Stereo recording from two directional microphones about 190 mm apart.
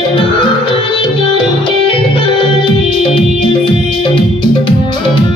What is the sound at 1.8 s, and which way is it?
Music, 25° left (ahead or behind).